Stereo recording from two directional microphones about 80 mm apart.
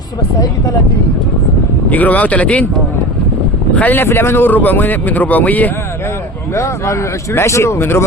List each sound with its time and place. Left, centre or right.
1.9 s speech: centre
3.8 s speech: left
6.5 s speech: left